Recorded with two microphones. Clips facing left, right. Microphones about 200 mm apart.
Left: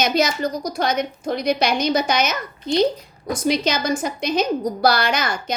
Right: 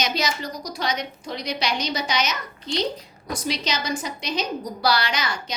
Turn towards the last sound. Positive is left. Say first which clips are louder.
# left 3 dB
turn(degrees=50)  # may be behind; listen again after turning